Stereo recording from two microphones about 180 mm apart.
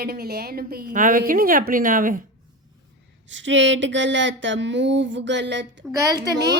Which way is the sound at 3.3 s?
90° right.